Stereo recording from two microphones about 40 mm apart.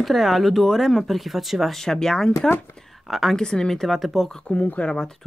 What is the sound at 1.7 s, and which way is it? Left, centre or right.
Speech, centre.